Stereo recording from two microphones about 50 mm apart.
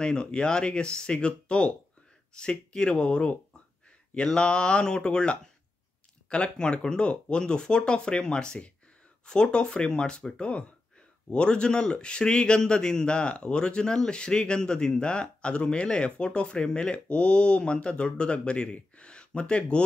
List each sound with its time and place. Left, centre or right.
0.0 s a man's voice: centre